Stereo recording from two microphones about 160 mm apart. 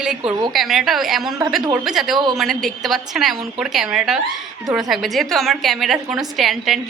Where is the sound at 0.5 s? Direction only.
Centre (ahead or behind).